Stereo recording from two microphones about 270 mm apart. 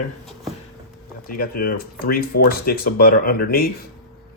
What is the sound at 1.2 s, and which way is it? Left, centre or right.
Speech, left.